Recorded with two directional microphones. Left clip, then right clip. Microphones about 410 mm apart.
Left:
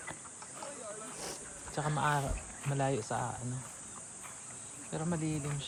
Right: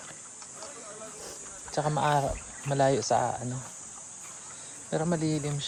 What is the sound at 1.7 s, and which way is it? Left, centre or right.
Speech, centre.